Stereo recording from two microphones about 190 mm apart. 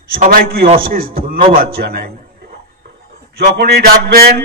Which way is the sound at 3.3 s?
55° right (ahead or behind).